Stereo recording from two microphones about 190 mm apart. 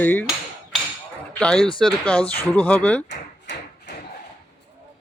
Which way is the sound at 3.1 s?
65° left (ahead or behind).